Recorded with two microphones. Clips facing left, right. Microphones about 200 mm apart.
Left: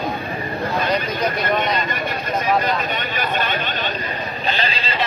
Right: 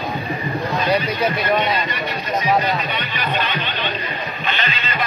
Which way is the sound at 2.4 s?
50° left (ahead or behind).